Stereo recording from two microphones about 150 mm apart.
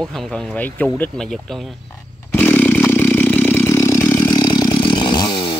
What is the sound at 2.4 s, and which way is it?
Vehicle, 10° left (ahead or behind).